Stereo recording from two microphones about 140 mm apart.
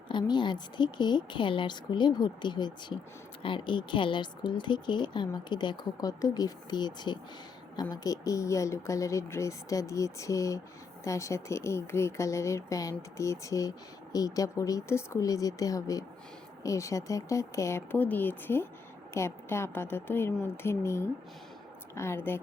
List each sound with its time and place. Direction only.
0.1 s a woman's voice: 35° left (ahead or behind); by 22.4 s 15° left (ahead or behind)